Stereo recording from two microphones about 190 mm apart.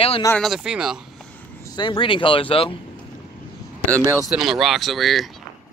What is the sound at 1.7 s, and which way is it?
Speech, 25° left (ahead or behind).